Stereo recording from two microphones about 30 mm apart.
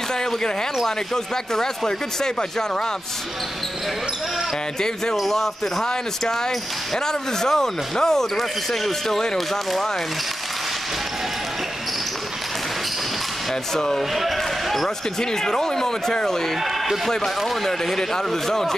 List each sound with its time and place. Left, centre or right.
0.8 s speech: centre
5.2 s speech: centre
5.9 s speech: centre
13.7 s speech: centre
14.1 s basketball bounce: centre
15.1 s speech: centre
16.6 s a man's voice: centre
17.6 s speech: centre